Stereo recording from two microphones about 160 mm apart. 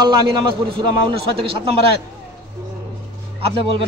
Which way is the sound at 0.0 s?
25° right (ahead or behind).